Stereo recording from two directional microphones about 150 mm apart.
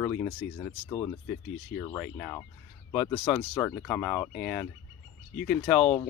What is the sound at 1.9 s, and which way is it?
Speech, 15° left (ahead or behind).